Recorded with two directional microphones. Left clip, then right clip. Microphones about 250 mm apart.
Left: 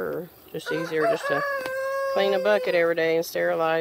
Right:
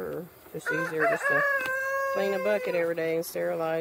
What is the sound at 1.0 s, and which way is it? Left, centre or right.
Chicken, left.